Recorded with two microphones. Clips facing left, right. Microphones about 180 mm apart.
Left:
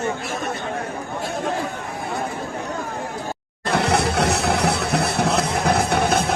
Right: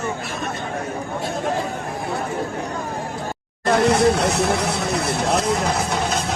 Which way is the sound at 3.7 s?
65° left (ahead or behind).